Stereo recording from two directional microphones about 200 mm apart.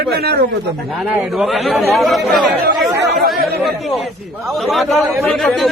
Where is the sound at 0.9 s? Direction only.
5° right (ahead or behind).